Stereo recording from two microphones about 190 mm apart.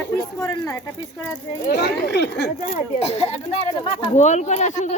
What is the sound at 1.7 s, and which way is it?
Speech, 60° left (ahead or behind).